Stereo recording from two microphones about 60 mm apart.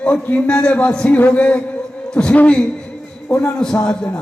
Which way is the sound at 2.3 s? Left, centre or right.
Left.